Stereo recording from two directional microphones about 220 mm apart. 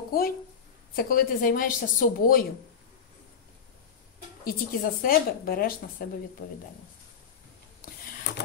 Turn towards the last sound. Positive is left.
turn(degrees=40)  # may be behind; listen again after turning